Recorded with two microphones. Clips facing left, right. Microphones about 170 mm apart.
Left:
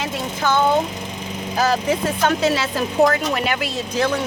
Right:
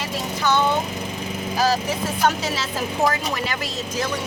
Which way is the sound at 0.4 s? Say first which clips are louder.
Left 1 dB; 50° left (ahead or behind).